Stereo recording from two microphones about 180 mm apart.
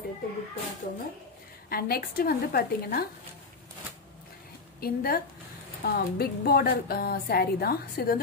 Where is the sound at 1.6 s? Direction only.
55° left (ahead or behind).